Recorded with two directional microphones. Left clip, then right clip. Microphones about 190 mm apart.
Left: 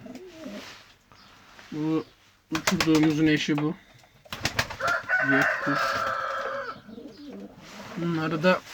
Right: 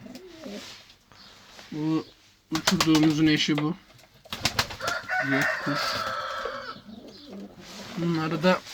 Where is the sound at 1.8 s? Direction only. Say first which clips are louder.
Even; centre (ahead or behind).